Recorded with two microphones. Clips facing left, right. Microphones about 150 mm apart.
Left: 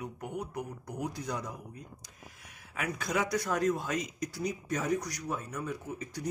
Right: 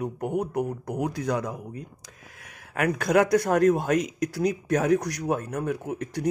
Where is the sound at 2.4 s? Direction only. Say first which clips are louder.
Right 11 dB; 65° right (ahead or behind).